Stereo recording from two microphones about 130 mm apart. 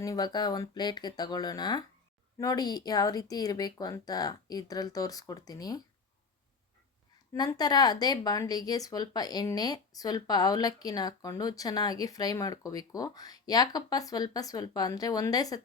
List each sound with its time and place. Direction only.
0.0 s speech: 30° left (ahead or behind)
7.3 s speech: 30° left (ahead or behind)